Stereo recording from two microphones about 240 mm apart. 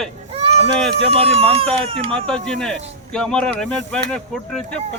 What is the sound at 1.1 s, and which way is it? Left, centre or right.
Speech, right.